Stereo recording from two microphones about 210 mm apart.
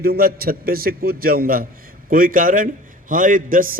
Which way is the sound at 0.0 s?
45° right (ahead or behind).